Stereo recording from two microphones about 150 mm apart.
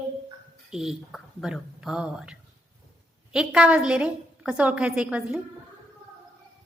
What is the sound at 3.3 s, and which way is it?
A woman's voice, 5° right (ahead or behind).